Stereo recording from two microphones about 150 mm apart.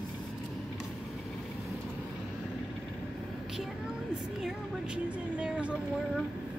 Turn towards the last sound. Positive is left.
turn(degrees=-10)  # may be behind; listen again after turning